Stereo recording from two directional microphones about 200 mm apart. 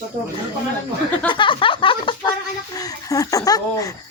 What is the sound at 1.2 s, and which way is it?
Speech, 25° left (ahead or behind).